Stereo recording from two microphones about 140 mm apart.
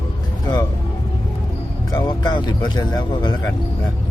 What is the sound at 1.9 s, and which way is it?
Speech, 30° left (ahead or behind).